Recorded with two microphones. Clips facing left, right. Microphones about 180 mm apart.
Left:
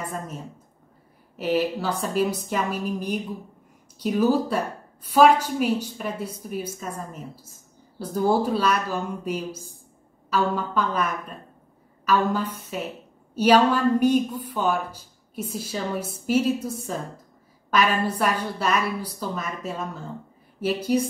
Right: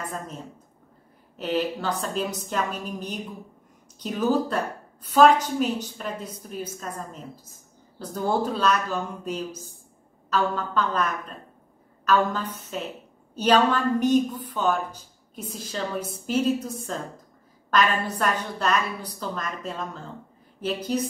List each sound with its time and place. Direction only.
1.3 s a woman's voice: 10° left (ahead or behind)